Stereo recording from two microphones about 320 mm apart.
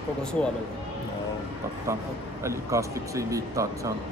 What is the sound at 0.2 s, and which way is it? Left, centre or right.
Speech, centre.